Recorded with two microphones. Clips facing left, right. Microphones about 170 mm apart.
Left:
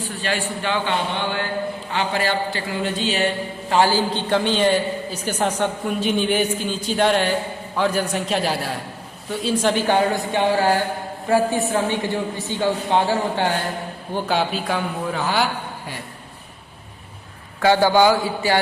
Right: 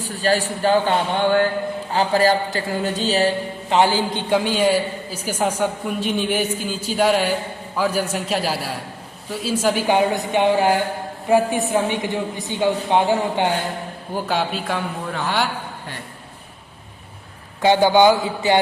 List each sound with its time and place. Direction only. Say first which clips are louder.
0.0 s speech: right 5 dB; 40° right (ahead or behind)
3.7 s a man's voice: even; 20° right (ahead or behind)
14.3 s a man's voice: left 1 dB; centre (ahead or behind)
17.6 s a man's voice: right 1 dB; 20° right (ahead or behind)